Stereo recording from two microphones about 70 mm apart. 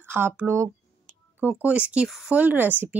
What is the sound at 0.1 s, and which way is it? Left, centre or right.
Speech, right.